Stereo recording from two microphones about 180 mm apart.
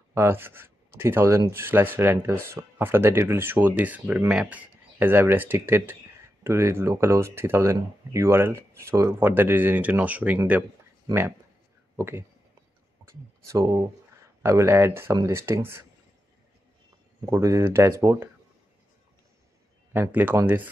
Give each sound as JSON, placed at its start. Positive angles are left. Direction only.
{"t": 0.1, "sound": "speech", "side_deg": -15}
{"t": 13.5, "sound": "speech", "side_deg": -15}
{"t": 17.3, "sound": "speech", "side_deg": -15}
{"t": 19.9, "sound": "speech", "side_deg": -10}